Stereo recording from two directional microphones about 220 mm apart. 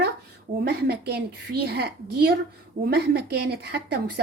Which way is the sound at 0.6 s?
50° right (ahead or behind).